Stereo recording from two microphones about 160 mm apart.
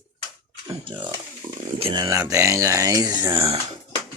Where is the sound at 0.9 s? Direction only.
30° right (ahead or behind).